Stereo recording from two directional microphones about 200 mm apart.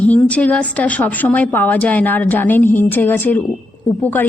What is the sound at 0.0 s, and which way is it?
A woman's voice, 5° left (ahead or behind).